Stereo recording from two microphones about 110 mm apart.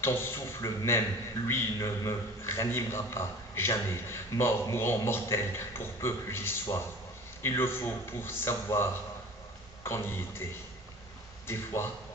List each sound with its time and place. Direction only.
0.0 s a man's voice: 20° left (ahead or behind)
11.4 s a man's voice: 20° left (ahead or behind)